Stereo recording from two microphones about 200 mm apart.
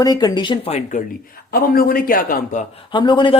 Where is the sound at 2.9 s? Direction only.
20° left (ahead or behind).